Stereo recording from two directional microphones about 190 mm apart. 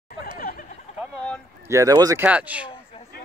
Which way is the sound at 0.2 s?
50° left (ahead or behind).